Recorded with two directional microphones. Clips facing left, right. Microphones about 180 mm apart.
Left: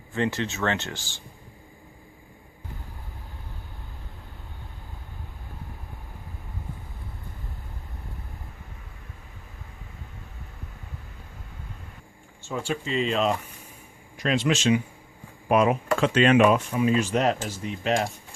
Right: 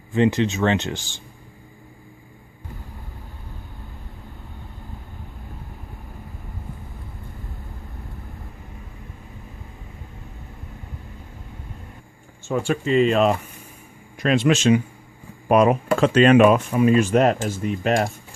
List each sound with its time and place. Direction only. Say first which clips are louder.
0.1 s speech: right 8 dB; 15° right (ahead or behind)
12.5 s speech: right 8 dB; 55° right (ahead or behind)